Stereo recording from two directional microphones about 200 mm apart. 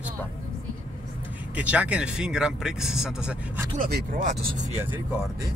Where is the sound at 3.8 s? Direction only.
45° right (ahead or behind).